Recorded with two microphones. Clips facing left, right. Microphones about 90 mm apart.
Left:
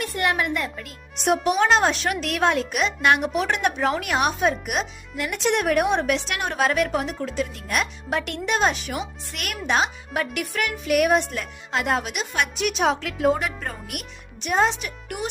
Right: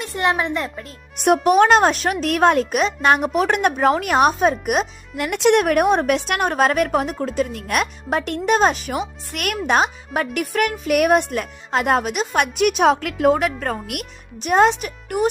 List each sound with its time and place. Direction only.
0.0 s a woman's voice: 25° right (ahead or behind)
1.2 s speech: 55° right (ahead or behind)
5.3 s speech: 70° right (ahead or behind); by 7.9 s 55° right (ahead or behind)
8.1 s speech: 40° right (ahead or behind)
12.4 s speech: 55° right (ahead or behind)
14.4 s speech: 55° right (ahead or behind)
14.8 s speech: 45° right (ahead or behind)